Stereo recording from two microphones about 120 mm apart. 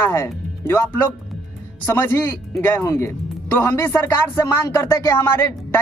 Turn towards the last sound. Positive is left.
turn(degrees=20)  # may be behind; listen again after turning